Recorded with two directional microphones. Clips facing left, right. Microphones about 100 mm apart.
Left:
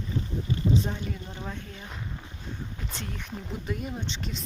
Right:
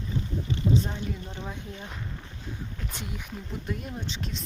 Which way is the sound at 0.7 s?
Centre (ahead or behind).